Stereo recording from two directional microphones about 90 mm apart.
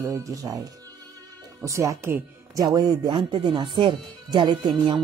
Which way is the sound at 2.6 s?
50° right (ahead or behind).